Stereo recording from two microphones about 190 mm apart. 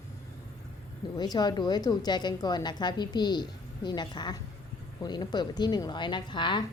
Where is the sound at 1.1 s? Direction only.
20° left (ahead or behind).